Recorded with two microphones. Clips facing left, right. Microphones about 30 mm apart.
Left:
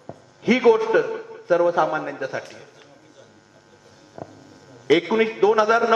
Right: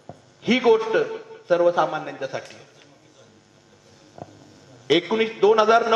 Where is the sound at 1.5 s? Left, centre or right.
Centre.